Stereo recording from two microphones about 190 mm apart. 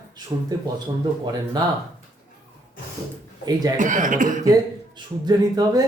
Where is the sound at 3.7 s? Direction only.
40° right (ahead or behind).